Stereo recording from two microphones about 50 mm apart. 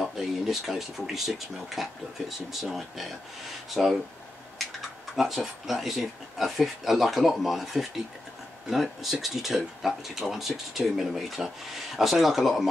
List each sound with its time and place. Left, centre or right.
0.0 s speech: centre
5.1 s speech: centre